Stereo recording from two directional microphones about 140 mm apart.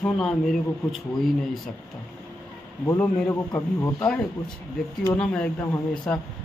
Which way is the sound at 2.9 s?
15° left (ahead or behind).